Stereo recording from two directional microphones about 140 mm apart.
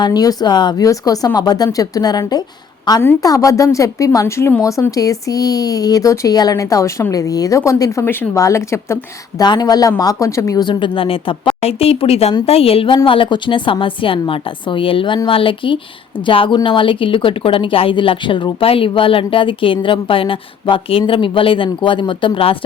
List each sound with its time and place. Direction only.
0.0 s a woman's voice: 30° left (ahead or behind)